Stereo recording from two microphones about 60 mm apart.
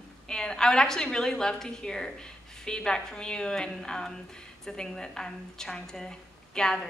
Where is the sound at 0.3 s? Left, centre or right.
Centre.